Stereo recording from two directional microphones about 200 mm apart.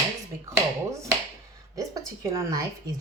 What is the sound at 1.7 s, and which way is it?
Speech, 15° right (ahead or behind).